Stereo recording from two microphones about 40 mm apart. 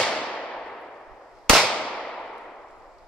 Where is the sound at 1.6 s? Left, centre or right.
Left.